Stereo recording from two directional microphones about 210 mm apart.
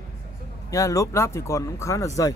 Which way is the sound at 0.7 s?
15° left (ahead or behind).